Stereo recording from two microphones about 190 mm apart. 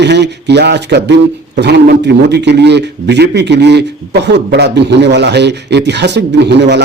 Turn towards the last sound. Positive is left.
turn(degrees=-65)  # may be behind; listen again after turning